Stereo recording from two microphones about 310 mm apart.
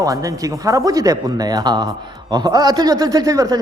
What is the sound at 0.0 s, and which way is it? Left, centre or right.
Speech, centre.